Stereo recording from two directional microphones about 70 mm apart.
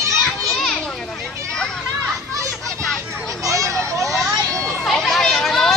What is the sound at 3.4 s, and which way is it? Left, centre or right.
Children playing, right.